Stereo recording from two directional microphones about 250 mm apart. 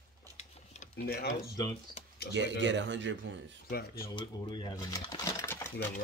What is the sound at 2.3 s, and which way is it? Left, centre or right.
Speech, right.